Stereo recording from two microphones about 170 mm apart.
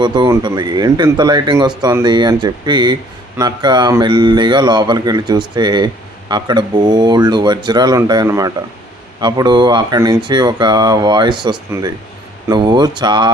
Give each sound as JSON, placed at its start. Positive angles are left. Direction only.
{"t": 0.0, "sound": "speech", "side_deg": -25}
{"t": 11.7, "sound": "speech", "side_deg": -15}